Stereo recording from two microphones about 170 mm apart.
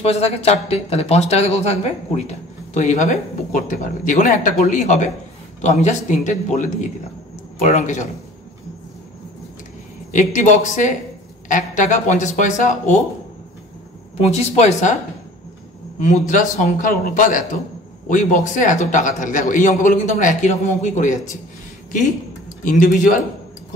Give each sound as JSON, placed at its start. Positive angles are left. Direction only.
{"t": 0.0, "sound": "a man's voice", "side_deg": 35}
{"t": 10.1, "sound": "a man's voice", "side_deg": 45}
{"t": 14.2, "sound": "speech", "side_deg": 40}
{"t": 16.0, "sound": "a man's voice", "side_deg": 45}
{"t": 22.6, "sound": "a man's voice", "side_deg": 55}